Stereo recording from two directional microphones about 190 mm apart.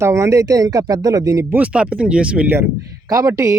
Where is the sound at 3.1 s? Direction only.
20° right (ahead or behind).